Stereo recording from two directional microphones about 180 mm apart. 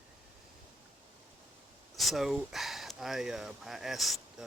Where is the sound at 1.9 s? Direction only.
Centre (ahead or behind).